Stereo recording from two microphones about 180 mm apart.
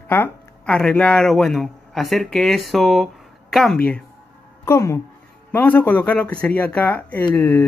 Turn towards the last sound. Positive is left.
turn(degrees=10)  # may be behind; listen again after turning